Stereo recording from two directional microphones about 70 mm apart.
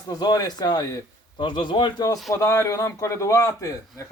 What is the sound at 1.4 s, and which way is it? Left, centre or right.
Speech, left.